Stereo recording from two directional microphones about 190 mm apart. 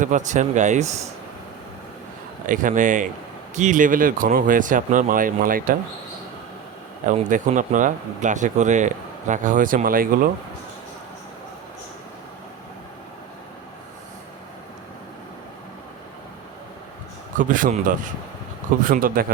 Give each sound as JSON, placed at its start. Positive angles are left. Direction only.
{"t": 0.0, "sound": "speech", "side_deg": -40}
{"t": 2.5, "sound": "speech", "side_deg": -45}
{"t": 7.0, "sound": "speech", "side_deg": -40}
{"t": 17.3, "sound": "speech", "side_deg": -45}